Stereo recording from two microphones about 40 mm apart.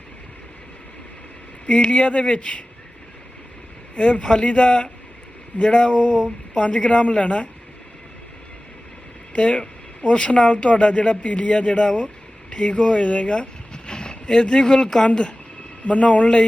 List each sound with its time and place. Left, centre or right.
1.8 s speech: left
3.9 s speech: left
4.2 s speech: left
9.3 s speech: left